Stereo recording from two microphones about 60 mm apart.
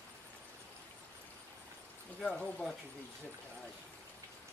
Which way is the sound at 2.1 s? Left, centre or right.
Centre.